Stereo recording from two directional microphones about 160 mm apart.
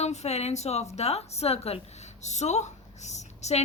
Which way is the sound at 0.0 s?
45° left (ahead or behind).